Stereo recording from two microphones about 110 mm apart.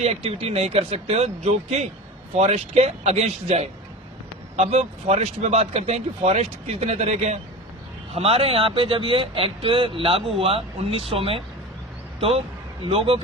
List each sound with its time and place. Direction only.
0.0 s speech: 65° right (ahead or behind); by 7.3 s 90° right
8.1 s speech: 65° right (ahead or behind)
12.9 s speech: 60° right (ahead or behind)